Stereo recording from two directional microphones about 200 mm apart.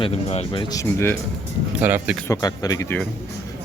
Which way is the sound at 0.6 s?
15° left (ahead or behind).